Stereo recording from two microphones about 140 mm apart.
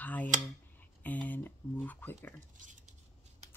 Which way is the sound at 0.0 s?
10° left (ahead or behind).